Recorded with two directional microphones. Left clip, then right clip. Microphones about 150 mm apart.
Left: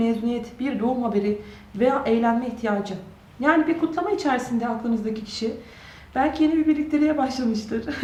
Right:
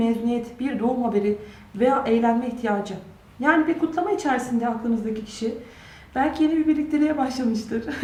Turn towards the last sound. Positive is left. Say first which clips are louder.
# even
turn(degrees=5)  # may be behind; listen again after turning